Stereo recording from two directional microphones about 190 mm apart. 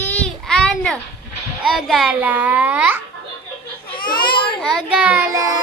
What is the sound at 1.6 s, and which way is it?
A child's voice, centre (ahead or behind).